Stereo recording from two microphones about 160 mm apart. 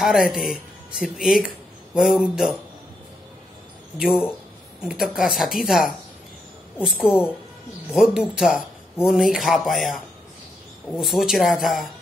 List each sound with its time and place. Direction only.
0.0 s speech: 5° right (ahead or behind)
4.8 s speech: 5° right (ahead or behind)